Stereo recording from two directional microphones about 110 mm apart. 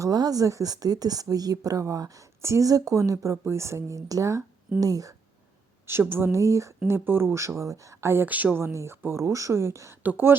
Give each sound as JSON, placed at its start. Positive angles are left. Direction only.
{"t": 0.0, "sound": "speech", "side_deg": -35}
{"t": 5.8, "sound": "speech", "side_deg": -20}